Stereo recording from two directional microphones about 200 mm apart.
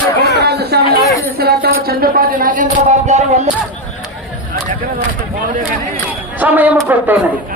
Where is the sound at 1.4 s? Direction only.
50° right (ahead or behind).